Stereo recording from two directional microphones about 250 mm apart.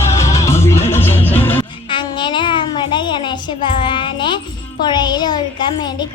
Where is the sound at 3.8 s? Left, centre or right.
Centre.